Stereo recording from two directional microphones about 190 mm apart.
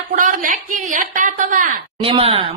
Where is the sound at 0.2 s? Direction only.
45° right (ahead or behind).